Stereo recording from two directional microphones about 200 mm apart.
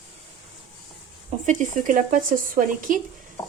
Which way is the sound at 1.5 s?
40° right (ahead or behind).